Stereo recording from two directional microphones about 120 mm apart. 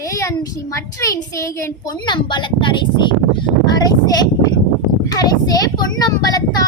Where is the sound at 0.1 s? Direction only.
25° left (ahead or behind).